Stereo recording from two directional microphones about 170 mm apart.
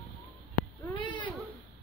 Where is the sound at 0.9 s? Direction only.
30° left (ahead or behind).